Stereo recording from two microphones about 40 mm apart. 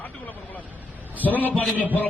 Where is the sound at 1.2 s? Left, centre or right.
Left.